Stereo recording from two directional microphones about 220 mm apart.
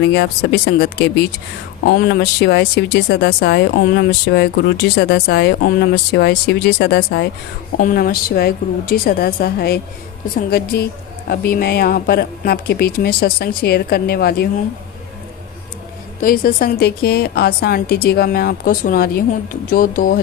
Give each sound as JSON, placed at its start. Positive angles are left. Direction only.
{"t": 0.0, "sound": "speech", "side_deg": 50}
{"t": 16.2, "sound": "speech", "side_deg": 40}